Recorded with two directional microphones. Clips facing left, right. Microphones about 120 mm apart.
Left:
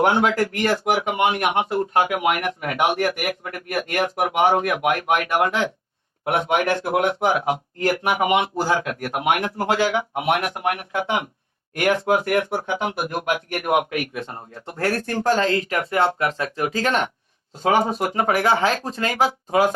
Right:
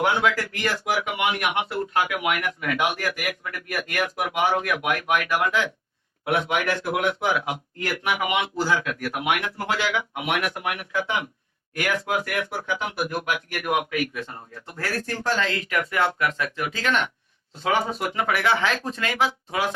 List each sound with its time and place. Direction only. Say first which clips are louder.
0.0 s speech: left 4 dB; 30° left (ahead or behind)
0.3 s speech: left 6 dB; 40° left (ahead or behind)
12.0 s speech: left 7 dB; 50° left (ahead or behind)
12.7 s speech: even; 35° left (ahead or behind)
15.0 s speech: left 5 dB; 45° left (ahead or behind)